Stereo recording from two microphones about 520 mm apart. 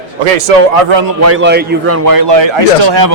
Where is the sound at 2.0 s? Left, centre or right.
Right.